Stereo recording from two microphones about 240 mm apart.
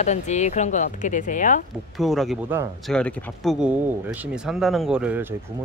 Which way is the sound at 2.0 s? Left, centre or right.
Centre.